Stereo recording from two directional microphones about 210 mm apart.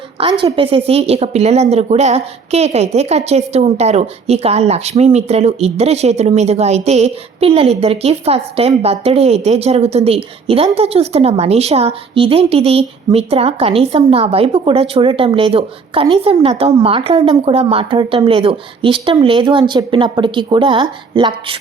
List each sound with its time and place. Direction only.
0.2 s a woman's voice: 25° right (ahead or behind)